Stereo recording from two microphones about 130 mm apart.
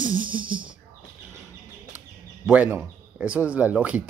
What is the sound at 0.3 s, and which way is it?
Speech, 10° right (ahead or behind).